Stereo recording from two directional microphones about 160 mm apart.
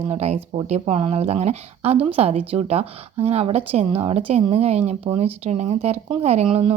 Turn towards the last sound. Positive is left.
turn(degrees=-40)  # may be behind; listen again after turning